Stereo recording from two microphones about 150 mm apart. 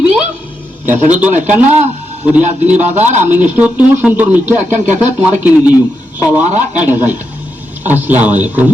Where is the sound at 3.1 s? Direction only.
55° right (ahead or behind).